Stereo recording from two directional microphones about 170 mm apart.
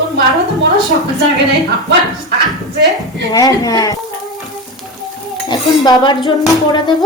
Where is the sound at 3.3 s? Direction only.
20° left (ahead or behind).